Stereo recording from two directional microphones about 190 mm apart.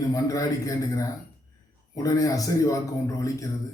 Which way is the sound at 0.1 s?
20° left (ahead or behind).